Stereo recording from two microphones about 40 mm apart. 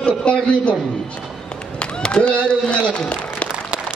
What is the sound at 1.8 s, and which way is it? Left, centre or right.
Speech, left.